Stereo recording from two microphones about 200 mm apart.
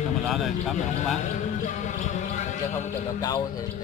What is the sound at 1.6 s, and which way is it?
Music, 40° left (ahead or behind).